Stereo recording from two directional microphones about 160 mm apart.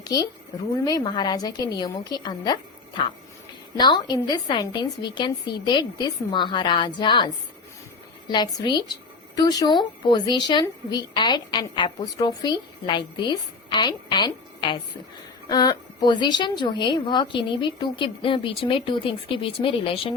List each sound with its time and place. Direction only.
0.0 s speech: 25° left (ahead or behind)
3.8 s speech: 25° left (ahead or behind)
8.3 s speech: 30° left (ahead or behind)